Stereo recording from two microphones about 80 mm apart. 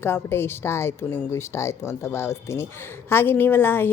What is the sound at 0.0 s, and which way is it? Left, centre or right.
A woman's voice, left.